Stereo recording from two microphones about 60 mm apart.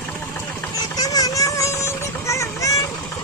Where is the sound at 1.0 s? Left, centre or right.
Left.